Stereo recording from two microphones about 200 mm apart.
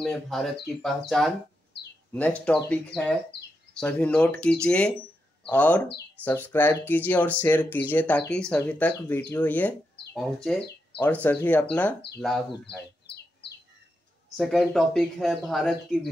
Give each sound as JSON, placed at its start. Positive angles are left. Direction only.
{"t": 0.0, "sound": "speech", "side_deg": 0}
{"t": 2.4, "sound": "speech", "side_deg": 5}
{"t": 13.0, "sound": "bird", "side_deg": 55}
{"t": 14.3, "sound": "speech", "side_deg": 0}